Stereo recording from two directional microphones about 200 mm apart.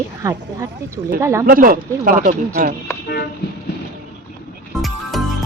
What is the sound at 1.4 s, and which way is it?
Speech, 45° right (ahead or behind).